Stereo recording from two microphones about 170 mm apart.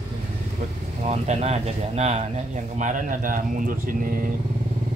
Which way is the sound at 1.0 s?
40° right (ahead or behind).